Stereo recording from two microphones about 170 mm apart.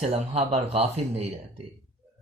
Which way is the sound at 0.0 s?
40° right (ahead or behind).